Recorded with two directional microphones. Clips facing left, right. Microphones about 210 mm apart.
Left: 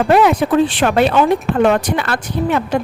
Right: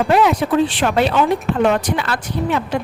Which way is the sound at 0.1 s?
55° left (ahead or behind).